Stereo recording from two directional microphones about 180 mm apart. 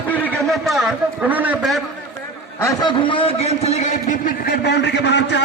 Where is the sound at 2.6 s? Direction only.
20° left (ahead or behind); by 5.4 s 70° left (ahead or behind).